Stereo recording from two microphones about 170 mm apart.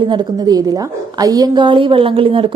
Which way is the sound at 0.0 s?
25° right (ahead or behind).